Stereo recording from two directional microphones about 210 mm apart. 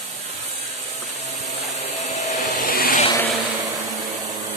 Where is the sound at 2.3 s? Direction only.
45° left (ahead or behind).